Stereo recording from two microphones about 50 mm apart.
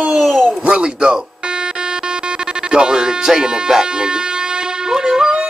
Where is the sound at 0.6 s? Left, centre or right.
Centre.